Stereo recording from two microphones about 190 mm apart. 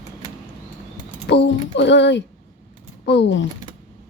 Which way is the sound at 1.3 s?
65° left (ahead or behind).